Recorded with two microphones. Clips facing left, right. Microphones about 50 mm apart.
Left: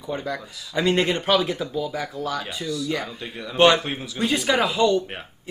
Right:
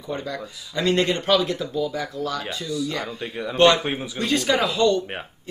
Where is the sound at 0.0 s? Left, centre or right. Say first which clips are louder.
Left 1 dB; centre.